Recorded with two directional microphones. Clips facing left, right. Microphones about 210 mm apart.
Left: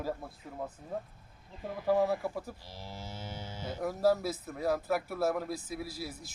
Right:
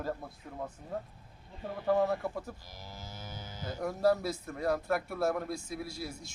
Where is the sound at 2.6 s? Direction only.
30° left (ahead or behind).